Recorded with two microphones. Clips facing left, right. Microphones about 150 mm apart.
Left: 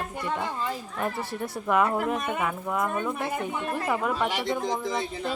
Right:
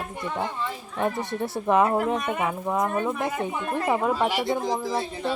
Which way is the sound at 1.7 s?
25° right (ahead or behind).